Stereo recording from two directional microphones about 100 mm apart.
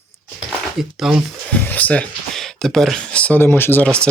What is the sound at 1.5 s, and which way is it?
Speech, 15° left (ahead or behind).